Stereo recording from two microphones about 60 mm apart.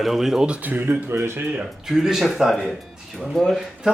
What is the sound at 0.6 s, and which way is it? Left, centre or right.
Speech, right.